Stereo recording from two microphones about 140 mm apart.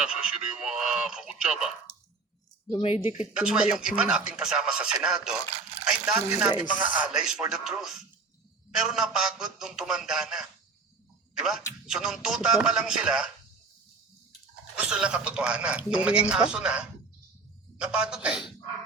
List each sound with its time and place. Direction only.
0.0 s speech: 5° right (ahead or behind)
2.6 s speech: 40° left (ahead or behind)
3.1 s speech: 5° right (ahead or behind)
6.7 s speech: 70° left (ahead or behind)
6.9 s speech: 5° right (ahead or behind)
14.8 s a man's voice: 5° right (ahead or behind)